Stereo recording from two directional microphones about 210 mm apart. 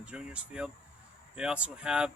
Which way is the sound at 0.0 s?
5° right (ahead or behind).